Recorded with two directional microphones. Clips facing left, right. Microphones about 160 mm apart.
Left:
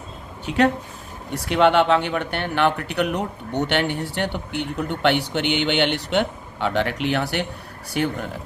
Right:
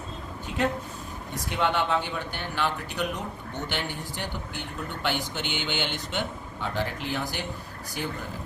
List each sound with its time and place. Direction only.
0.4 s speech: 80° left